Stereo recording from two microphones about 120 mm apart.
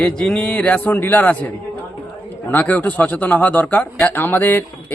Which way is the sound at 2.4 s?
15° left (ahead or behind).